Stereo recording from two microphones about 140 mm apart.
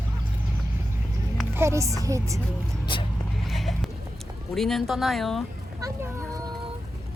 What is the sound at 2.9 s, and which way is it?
Speech, 35° left (ahead or behind).